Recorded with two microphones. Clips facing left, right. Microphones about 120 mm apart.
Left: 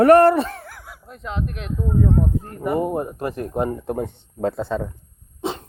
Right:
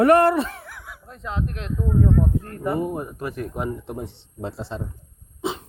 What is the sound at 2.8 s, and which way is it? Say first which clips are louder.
Speech: left 4 dB; 30° left (ahead or behind).